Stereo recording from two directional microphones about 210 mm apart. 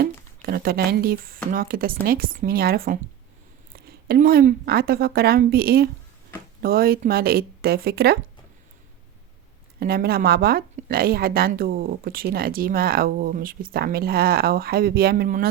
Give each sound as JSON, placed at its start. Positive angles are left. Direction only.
{"t": 0.0, "sound": "a woman's voice", "side_deg": -45}
{"t": 9.8, "sound": "a woman's voice", "side_deg": -45}